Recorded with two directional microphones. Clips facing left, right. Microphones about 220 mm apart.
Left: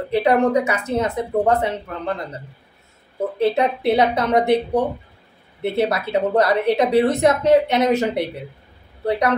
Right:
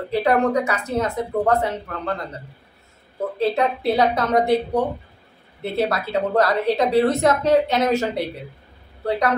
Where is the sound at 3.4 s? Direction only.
20° left (ahead or behind).